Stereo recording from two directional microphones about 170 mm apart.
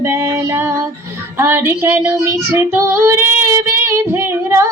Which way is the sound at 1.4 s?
15° right (ahead or behind).